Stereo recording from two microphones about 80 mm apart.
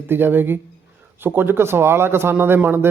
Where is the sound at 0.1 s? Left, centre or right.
Right.